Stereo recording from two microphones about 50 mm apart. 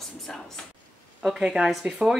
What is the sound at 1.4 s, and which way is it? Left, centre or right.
Speech, centre.